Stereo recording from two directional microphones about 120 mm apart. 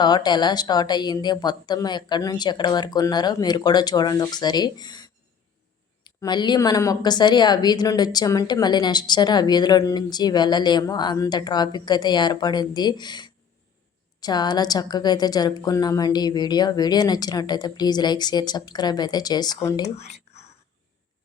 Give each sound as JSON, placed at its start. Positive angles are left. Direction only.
{"t": 0.0, "sound": "a woman's voice", "side_deg": 35}
{"t": 20.0, "sound": "whispering", "side_deg": 65}